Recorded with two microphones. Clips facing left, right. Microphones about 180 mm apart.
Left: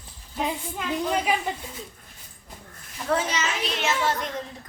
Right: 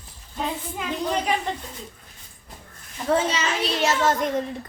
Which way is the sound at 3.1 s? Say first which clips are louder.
Right 4 dB; 30° right (ahead or behind).